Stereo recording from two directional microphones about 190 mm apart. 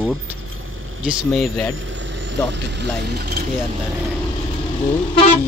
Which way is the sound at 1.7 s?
90° right.